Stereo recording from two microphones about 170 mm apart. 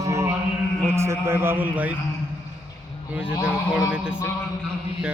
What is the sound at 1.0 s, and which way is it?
Speech, 15° right (ahead or behind).